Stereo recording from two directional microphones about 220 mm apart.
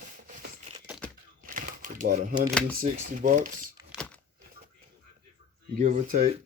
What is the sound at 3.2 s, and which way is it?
Speech, 35° right (ahead or behind).